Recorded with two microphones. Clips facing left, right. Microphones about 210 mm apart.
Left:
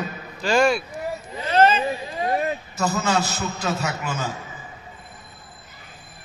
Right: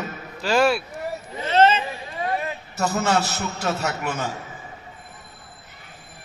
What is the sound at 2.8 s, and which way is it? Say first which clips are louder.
A man's voice: right 1 dB; 70° right (ahead or behind).